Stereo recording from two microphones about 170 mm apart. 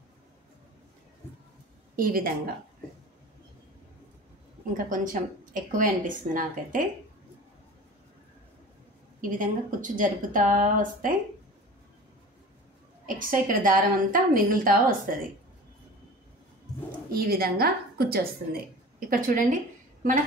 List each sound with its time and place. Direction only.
2.0 s a woman's voice: 55° right (ahead or behind)
4.7 s a woman's voice: 50° right (ahead or behind)
9.2 s a woman's voice: 50° right (ahead or behind)
13.0 s a woman's voice: 55° right (ahead or behind)
17.1 s a woman's voice: 60° right (ahead or behind)